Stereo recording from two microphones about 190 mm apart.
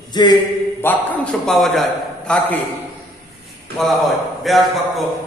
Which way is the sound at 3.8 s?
Centre (ahead or behind).